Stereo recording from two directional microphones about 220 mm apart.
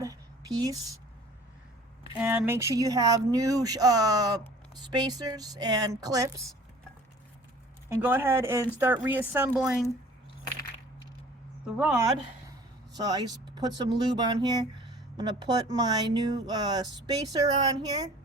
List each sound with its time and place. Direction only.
0.0 s a sound: 15° right (ahead or behind)
2.1 s speech: 5° right (ahead or behind)
8.0 s a woman's voice: 10° right (ahead or behind)
11.8 s a woman's voice: 5° right (ahead or behind)
13.0 s speech: 20° right (ahead or behind)